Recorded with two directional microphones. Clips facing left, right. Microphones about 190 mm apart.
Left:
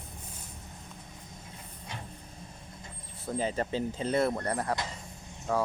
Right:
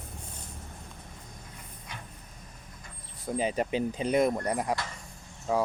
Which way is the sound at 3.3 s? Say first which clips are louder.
Right 2 dB; 15° right (ahead or behind).